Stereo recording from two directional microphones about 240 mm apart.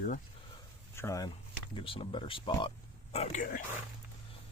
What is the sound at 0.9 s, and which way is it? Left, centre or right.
Speech, centre.